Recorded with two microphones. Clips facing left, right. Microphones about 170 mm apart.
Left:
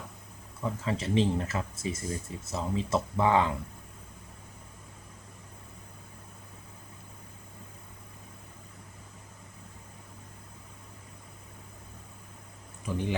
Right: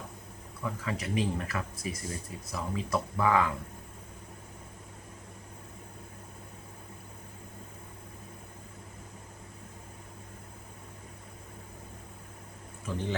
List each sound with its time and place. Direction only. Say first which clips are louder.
0.6 s speech: left 3 dB; 30° left (ahead or behind)
12.8 s a man's voice: left 2 dB; 15° left (ahead or behind)